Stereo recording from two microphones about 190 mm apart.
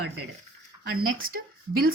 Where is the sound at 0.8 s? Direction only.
50° right (ahead or behind).